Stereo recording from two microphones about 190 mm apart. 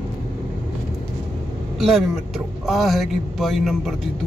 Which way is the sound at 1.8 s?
Centre (ahead or behind).